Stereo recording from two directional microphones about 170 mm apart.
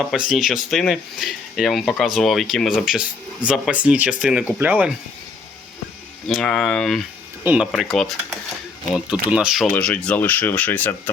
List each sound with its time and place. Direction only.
0.3 s speech: centre (ahead or behind)
6.2 s speech: 5° left (ahead or behind)
9.7 s speech: 5° left (ahead or behind)